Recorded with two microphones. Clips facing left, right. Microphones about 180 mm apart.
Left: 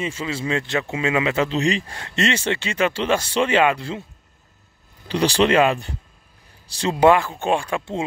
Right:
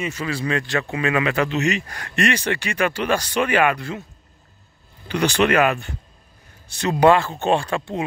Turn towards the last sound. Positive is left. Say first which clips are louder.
# right 1 dB
turn(degrees=10)  # may be behind; listen again after turning